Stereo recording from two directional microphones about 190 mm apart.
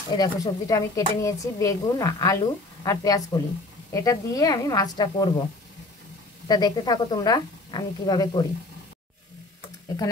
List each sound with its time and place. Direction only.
0.1 s speech: 20° left (ahead or behind)
6.4 s speech: 20° left (ahead or behind)